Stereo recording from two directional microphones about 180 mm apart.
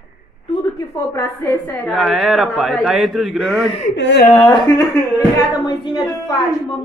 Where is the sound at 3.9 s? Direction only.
80° left.